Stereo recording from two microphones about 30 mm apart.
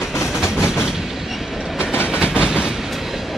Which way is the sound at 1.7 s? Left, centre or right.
Right.